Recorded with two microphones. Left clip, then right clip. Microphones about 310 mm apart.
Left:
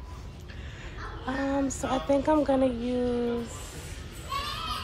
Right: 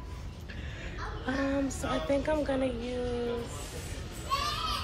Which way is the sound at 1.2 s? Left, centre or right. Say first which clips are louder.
Left 2 dB; centre.